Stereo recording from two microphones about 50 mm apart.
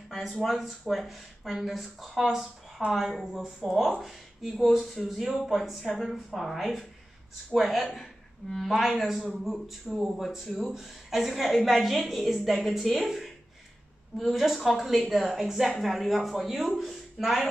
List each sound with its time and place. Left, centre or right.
0.1 s a woman's voice: centre